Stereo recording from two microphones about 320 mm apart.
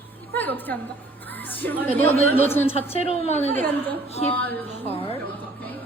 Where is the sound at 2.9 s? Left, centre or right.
Centre.